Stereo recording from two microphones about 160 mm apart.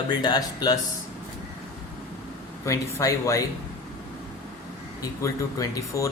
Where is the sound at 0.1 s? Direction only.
25° left (ahead or behind).